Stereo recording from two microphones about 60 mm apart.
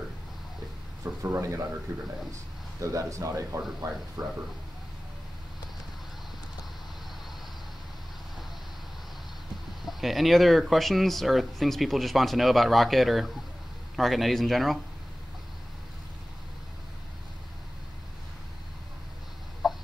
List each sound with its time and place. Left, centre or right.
1.0 s speech: right
2.3 s speech: right
3.8 s speech: right
9.8 s speech: centre
19.6 s a sound: centre